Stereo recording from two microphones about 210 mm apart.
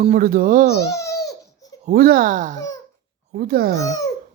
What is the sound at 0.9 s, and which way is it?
Babbling, 15° left (ahead or behind).